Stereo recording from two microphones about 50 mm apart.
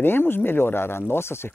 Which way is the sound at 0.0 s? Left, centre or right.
Left.